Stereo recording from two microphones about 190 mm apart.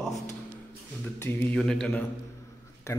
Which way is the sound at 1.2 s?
10° left (ahead or behind).